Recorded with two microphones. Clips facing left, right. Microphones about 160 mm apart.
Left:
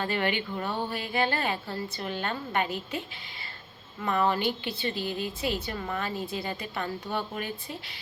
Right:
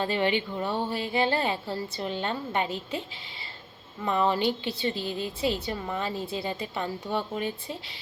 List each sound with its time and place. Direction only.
0.0 s a woman's voice: 25° right (ahead or behind)
4.0 s a woman's voice: 25° right (ahead or behind)